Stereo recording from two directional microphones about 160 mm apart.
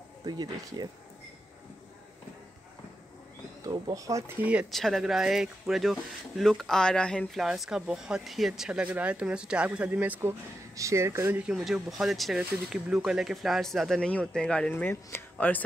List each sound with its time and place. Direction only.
0.2 s speech: 25° right (ahead or behind)
3.6 s speech: 20° right (ahead or behind)
4.5 s speech: 5° right (ahead or behind)